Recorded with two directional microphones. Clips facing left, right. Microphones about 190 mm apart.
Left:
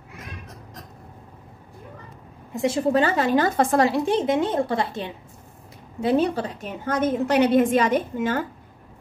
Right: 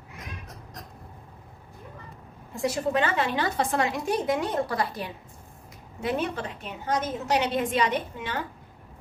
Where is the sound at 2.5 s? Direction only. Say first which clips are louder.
Left 5 dB; 25° left (ahead or behind); by 8.4 s 45° left (ahead or behind).